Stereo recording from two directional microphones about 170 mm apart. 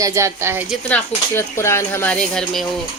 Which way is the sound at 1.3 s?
15° left (ahead or behind).